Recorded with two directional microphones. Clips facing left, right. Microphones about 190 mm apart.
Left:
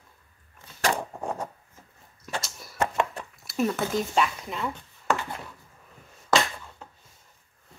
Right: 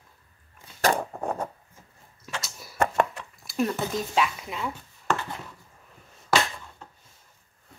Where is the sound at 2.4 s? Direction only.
Centre (ahead or behind).